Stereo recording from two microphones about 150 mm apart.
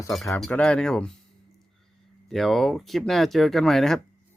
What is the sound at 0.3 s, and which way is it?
Speech, 5° left (ahead or behind).